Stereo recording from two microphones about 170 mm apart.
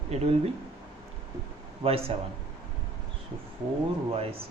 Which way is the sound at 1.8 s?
35° right (ahead or behind).